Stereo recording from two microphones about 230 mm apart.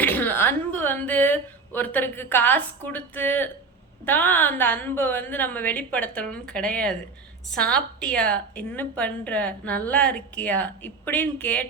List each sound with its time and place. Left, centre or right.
0.0 s a woman's voice: centre